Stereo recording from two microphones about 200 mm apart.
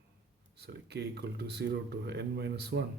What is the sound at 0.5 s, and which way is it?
Speech, 55° right (ahead or behind).